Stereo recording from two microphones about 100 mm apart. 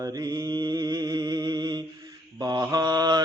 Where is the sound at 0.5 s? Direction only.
40° right (ahead or behind).